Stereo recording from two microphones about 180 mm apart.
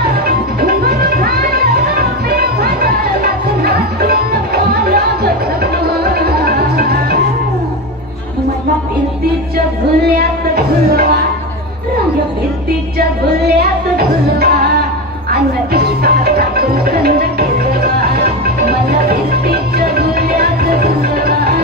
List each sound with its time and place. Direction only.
0.6 s music: 55° right (ahead or behind)
10.0 s music: 60° right (ahead or behind)
13.4 s music: 60° right (ahead or behind)
15.7 s music: 60° right (ahead or behind)